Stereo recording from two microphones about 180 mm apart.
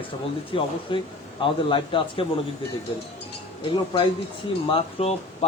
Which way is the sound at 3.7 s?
30° left (ahead or behind).